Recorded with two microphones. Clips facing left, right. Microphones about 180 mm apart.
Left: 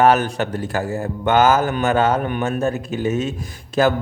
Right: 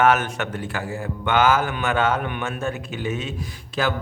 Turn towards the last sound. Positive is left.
turn(degrees=45)  # may be behind; listen again after turning